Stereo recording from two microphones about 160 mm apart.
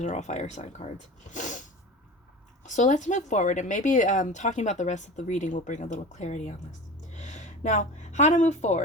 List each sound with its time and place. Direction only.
0.0 s a woman's voice: 50° left (ahead or behind)